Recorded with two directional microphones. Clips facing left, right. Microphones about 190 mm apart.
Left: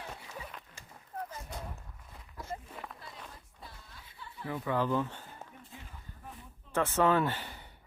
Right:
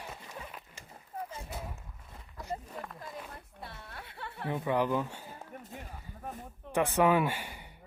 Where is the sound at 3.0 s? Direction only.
65° right (ahead or behind).